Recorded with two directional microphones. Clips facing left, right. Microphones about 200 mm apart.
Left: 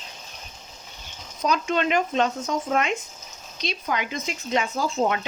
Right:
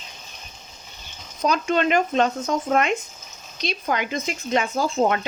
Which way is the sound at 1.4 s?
50° right (ahead or behind).